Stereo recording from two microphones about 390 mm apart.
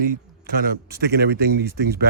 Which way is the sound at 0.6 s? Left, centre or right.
Right.